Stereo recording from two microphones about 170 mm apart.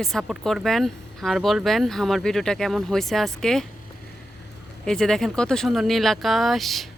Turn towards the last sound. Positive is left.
turn(degrees=0)  # may be behind; listen again after turning